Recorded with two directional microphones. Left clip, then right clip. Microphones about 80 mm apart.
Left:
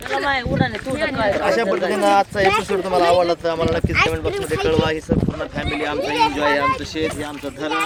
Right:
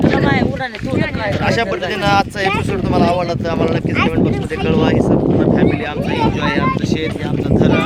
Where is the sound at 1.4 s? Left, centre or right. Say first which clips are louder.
Right 1 dB; right.